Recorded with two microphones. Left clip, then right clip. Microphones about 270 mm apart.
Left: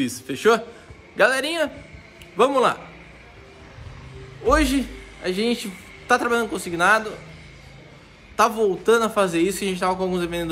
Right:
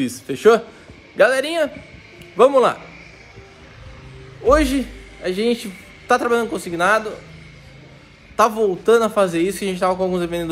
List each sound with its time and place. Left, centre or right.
0.0 s a man's voice: centre
4.5 s a man's voice: centre
8.4 s a man's voice: centre